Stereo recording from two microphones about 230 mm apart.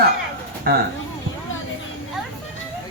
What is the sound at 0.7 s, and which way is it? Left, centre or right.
Speech, right.